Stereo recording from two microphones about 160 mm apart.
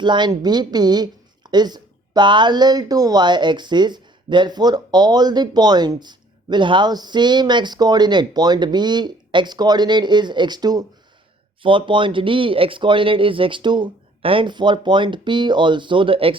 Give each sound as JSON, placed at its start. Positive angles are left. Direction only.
{"t": 0.0, "sound": "speech", "side_deg": -30}